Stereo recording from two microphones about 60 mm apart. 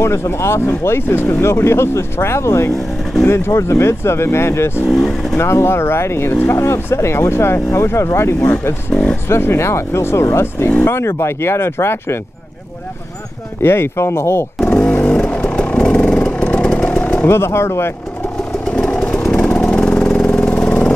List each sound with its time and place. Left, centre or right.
0.0 s speech: left
4.8 s speech: centre
5.4 s speech: left
13.6 s speech: left
14.7 s vehicle: left
17.3 s speech: left
18.7 s engine: centre
19.6 s vehicle: centre